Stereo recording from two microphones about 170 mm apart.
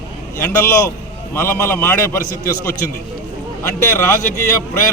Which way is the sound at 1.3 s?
15° left (ahead or behind).